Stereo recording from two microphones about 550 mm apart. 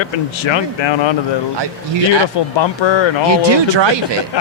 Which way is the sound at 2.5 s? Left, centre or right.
Left.